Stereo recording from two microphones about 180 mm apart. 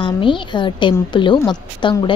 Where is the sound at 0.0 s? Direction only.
30° left (ahead or behind).